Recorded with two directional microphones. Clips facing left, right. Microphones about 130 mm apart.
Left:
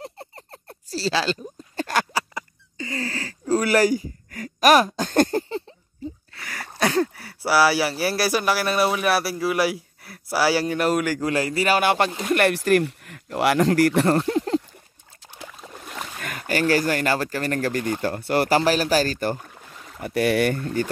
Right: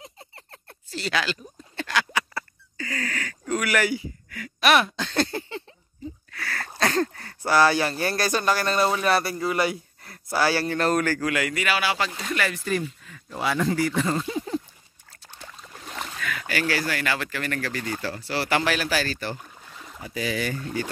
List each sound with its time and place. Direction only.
0.4 s a sound: 35° left (ahead or behind)
2.3 s a sound: 25° left (ahead or behind); by 5.6 s 45° left (ahead or behind)
6.3 s a sound: 15° left (ahead or behind)
6.8 s speech: 10° left (ahead or behind)
11.1 s speech: 30° left (ahead or behind)
11.8 s speech: 55° left (ahead or behind)
12.4 s speech: 70° left (ahead or behind)
16.2 s speech: 45° left (ahead or behind)
18.5 s speech: 35° left (ahead or behind)
20.0 s speech: 60° left (ahead or behind)